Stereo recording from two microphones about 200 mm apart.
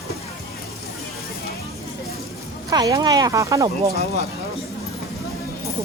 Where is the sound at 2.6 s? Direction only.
20° right (ahead or behind).